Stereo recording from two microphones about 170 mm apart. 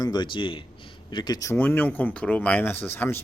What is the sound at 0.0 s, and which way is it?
A man's voice, 25° left (ahead or behind).